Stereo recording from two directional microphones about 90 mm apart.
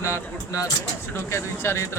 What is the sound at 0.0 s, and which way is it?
Speech, 35° left (ahead or behind).